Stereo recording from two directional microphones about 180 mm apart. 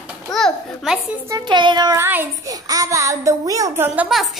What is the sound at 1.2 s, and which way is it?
Child singing, 20° right (ahead or behind).